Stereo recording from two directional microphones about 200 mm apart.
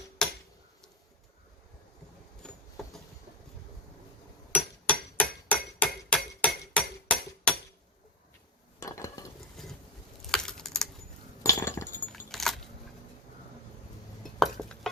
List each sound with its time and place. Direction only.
0.2 s tick-tock: 5° left (ahead or behind)
2.4 s vehicle: 5° left (ahead or behind)
4.9 s hammer: 5° left (ahead or behind)
8.8 s stir: 15° left (ahead or behind)
9.6 s boat: centre (ahead or behind)
10.3 s computer keyboard: 5° left (ahead or behind)
11.4 s chink: 15° left (ahead or behind)
12.3 s keys jangling: centre (ahead or behind)
14.3 s dishes: centre (ahead or behind)